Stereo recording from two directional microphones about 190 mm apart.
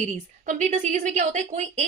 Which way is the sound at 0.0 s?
40° right (ahead or behind).